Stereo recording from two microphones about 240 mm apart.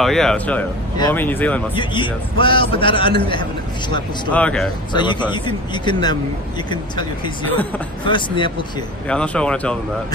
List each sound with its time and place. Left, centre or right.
0.0 s speech: centre
1.8 s a man's voice: centre
4.3 s speech: centre
4.9 s a man's voice: centre
9.0 s speech: centre